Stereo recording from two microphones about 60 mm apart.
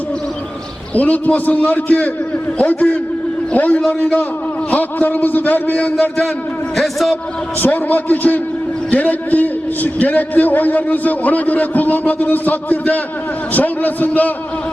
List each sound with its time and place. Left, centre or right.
0.9 s a man's voice: left
4.7 s a man's voice: left
6.7 s a man's voice: centre
7.6 s a man's voice: left